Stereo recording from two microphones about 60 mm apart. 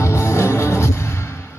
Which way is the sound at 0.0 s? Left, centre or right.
Left.